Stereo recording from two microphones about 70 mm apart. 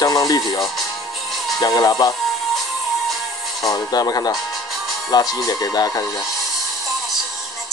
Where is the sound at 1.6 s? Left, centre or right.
Left.